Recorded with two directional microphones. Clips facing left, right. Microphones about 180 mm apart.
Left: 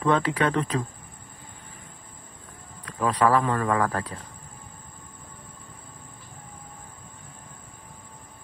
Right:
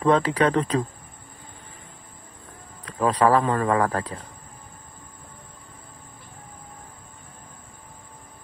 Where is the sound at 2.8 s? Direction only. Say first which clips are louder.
Right 2 dB; 35° right (ahead or behind).